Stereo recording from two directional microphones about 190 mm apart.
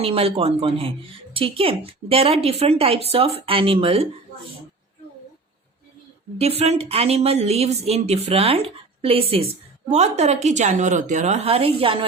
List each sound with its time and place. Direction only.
0.0 s speech: 30° right (ahead or behind)
6.4 s speech: 35° right (ahead or behind)